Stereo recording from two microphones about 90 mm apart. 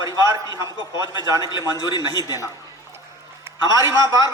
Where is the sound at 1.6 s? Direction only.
45° left (ahead or behind).